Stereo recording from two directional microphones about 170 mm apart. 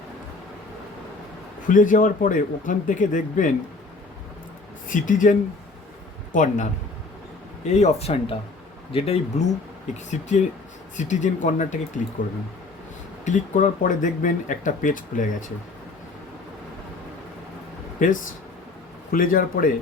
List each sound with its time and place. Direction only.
1.6 s speech: 50° left (ahead or behind)
4.9 s speech: 50° left (ahead or behind)
7.7 s speech: 40° left (ahead or behind)
13.2 s speech: 45° left (ahead or behind)
19.1 s speech: 55° left (ahead or behind)